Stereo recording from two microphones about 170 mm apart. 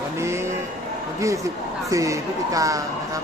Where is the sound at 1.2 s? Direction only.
20° right (ahead or behind).